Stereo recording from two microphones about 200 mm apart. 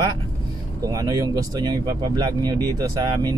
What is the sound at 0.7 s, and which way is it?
Speech, 15° right (ahead or behind).